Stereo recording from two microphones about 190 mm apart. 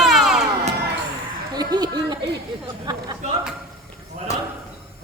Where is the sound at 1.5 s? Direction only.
20° right (ahead or behind).